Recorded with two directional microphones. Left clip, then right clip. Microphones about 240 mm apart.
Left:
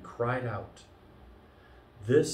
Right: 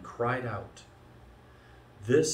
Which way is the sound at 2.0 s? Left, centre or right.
Centre.